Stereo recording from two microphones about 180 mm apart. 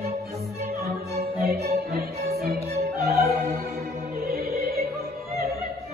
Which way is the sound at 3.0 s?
60° right (ahead or behind).